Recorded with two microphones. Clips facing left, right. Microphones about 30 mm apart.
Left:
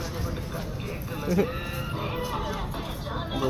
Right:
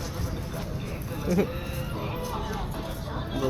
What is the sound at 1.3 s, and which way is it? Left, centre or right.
Speech, centre.